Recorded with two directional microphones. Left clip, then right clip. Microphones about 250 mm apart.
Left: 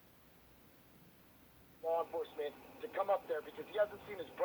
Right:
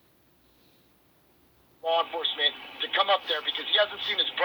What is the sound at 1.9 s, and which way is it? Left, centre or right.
Speech, centre.